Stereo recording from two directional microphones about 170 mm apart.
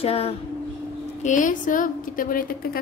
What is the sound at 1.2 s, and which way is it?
A woman's voice, 50° left (ahead or behind).